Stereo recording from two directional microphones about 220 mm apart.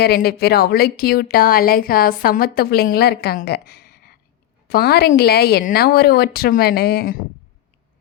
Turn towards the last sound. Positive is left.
turn(degrees=45)  # may be behind; listen again after turning